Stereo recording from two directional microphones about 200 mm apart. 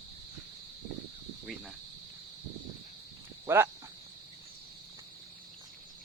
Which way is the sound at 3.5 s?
10° right (ahead or behind).